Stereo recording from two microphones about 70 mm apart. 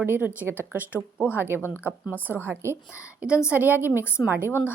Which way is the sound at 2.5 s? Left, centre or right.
Right.